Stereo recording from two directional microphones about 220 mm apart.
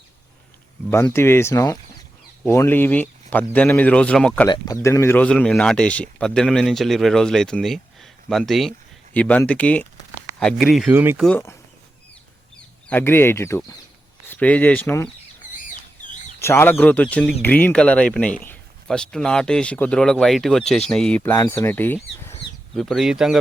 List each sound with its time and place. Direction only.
0.9 s speech: 10° left (ahead or behind)
4.4 s speech: 20° left (ahead or behind); by 11.3 s 10° right (ahead or behind)
11.3 s speech: 10° left (ahead or behind)
12.9 s speech: 10° left (ahead or behind)
16.4 s speech: 10° left (ahead or behind)